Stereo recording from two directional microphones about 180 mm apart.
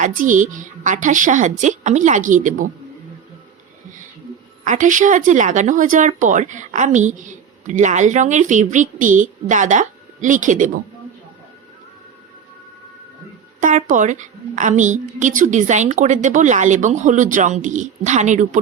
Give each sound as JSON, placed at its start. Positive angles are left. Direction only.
{"t": 0.0, "sound": "a woman's voice", "side_deg": -45}
{"t": 4.6, "sound": "a woman's voice", "side_deg": -45}
{"t": 13.6, "sound": "a woman's voice", "side_deg": -45}